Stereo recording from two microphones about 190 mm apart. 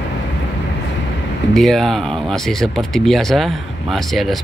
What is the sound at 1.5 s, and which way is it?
Speech, centre (ahead or behind).